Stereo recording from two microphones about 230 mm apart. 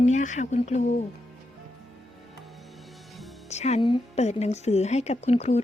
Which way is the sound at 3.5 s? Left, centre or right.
Left.